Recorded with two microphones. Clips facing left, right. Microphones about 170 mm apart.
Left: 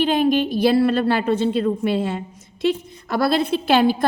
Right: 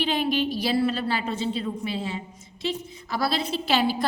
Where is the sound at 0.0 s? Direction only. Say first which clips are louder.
Left 7 dB; 50° left (ahead or behind).